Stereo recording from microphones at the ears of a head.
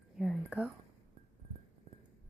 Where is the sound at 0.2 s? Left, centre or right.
Centre.